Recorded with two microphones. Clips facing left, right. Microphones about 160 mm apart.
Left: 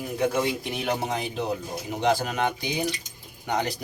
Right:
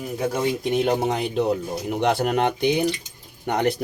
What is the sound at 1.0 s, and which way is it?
Speech, 60° right (ahead or behind).